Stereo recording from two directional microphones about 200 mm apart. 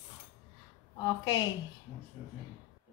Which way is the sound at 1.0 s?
20° left (ahead or behind).